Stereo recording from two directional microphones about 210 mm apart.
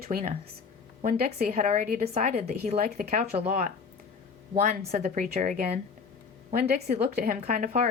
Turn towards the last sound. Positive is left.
turn(degrees=-40)  # may be behind; listen again after turning